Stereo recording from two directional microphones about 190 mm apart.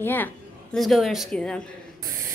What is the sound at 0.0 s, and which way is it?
A woman's voice, 10° left (ahead or behind).